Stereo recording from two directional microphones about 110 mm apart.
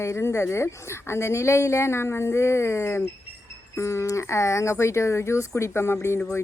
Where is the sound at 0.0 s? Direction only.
25° left (ahead or behind).